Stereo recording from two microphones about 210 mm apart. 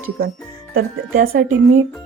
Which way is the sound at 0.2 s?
45° right (ahead or behind).